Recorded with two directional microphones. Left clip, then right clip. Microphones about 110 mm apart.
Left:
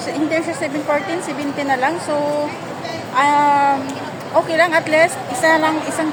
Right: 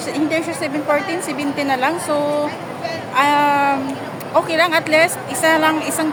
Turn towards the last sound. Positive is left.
turn(degrees=-15)  # may be behind; listen again after turning